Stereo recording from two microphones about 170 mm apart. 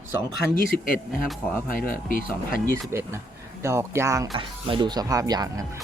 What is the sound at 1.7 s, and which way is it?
Speech, 55° left (ahead or behind).